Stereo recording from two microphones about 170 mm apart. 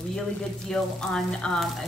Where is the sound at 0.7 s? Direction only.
Centre (ahead or behind).